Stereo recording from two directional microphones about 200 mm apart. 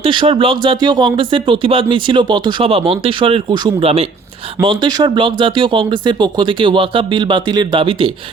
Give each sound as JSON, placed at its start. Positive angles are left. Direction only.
{"t": 0.0, "sound": "speech", "side_deg": -25}